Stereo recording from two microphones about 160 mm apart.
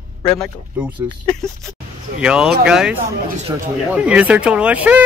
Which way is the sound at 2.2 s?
5° right (ahead or behind).